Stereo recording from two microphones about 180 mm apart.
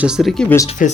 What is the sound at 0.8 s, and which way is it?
Speech, 45° left (ahead or behind).